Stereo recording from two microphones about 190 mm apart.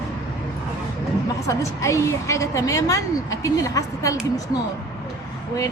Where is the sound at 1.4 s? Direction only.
15° left (ahead or behind).